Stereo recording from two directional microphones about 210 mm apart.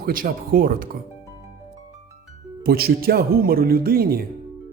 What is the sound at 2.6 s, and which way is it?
A man's voice, 45° right (ahead or behind).